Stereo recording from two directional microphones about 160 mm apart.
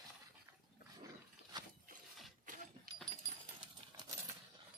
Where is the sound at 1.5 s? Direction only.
25° right (ahead or behind).